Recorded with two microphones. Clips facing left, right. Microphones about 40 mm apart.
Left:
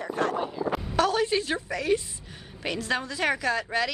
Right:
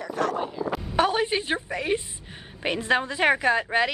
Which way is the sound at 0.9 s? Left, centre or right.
Right.